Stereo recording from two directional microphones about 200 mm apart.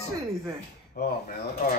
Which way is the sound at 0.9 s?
45° left (ahead or behind).